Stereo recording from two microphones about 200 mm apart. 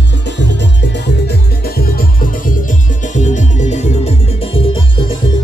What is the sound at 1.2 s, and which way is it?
Music, 50° left (ahead or behind).